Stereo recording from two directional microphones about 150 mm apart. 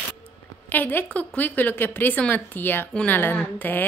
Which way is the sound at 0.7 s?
15° left (ahead or behind).